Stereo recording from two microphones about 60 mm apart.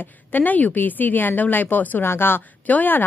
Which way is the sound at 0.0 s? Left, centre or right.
Left.